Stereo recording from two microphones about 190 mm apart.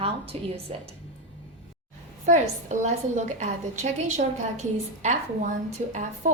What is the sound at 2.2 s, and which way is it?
A woman's voice, 40° right (ahead or behind).